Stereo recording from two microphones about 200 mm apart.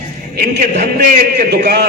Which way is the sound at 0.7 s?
55° right (ahead or behind).